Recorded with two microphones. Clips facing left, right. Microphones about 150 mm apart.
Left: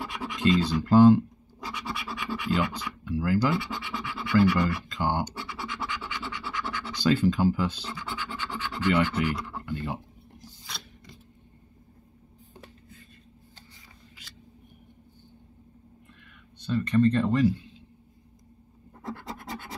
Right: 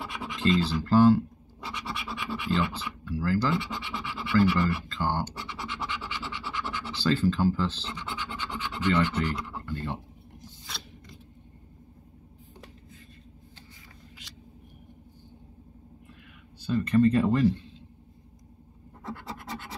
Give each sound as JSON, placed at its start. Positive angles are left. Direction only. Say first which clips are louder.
{"t": 0.0, "sound": "scratch", "louder": "left 2 dB", "side_deg": 0}
{"t": 0.6, "sound": "speech", "louder": "left 3 dB", "side_deg": 15}
{"t": 1.7, "sound": "scratch", "louder": "left 1 dB", "side_deg": 0}
{"t": 3.1, "sound": "speech", "louder": "left 2 dB", "side_deg": 15}
{"t": 3.5, "sound": "speech", "louder": "even", "side_deg": 0}
{"t": 4.8, "sound": "speech", "louder": "left 1 dB", "side_deg": 15}
{"t": 5.4, "sound": "scratch", "louder": "left 1 dB", "side_deg": 0}
{"t": 7.0, "sound": "speech", "louder": "left 2 dB", "side_deg": 15}
{"t": 9.7, "sound": "speech", "louder": "left 2 dB", "side_deg": 15}
{"t": 10.7, "sound": "scissors", "louder": "right 1 dB", "side_deg": 0}
{"t": 16.5, "sound": "speech", "louder": "right 1 dB", "side_deg": 0}